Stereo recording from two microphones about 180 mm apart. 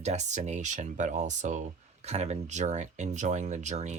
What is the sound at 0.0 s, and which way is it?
Speech, 40° right (ahead or behind).